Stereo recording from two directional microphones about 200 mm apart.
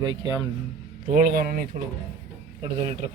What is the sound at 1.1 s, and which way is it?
Speech, 45° right (ahead or behind).